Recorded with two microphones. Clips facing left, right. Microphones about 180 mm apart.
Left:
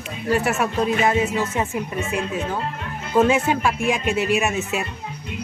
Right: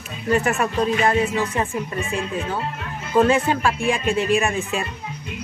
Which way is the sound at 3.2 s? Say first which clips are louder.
Even; 10° left (ahead or behind).